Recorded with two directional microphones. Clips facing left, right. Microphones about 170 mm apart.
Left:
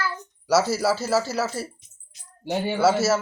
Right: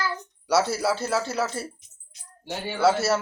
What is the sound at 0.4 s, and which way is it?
Speech, 5° left (ahead or behind).